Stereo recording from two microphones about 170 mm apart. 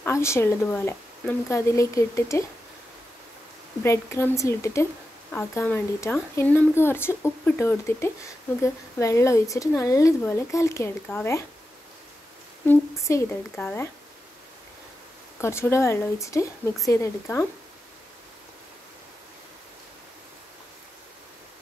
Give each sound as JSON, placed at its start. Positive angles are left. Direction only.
{"t": 0.0, "sound": "speech", "side_deg": 15}
{"t": 3.8, "sound": "speech", "side_deg": 15}
{"t": 12.6, "sound": "speech", "side_deg": 15}
{"t": 15.4, "sound": "speech", "side_deg": 15}